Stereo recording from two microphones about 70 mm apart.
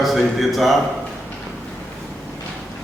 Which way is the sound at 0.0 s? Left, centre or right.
Centre.